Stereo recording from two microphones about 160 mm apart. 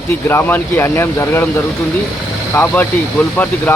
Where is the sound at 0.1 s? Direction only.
15° left (ahead or behind).